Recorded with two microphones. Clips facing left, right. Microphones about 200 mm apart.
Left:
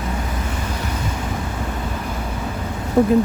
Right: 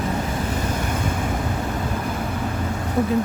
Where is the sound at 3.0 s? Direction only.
60° left (ahead or behind).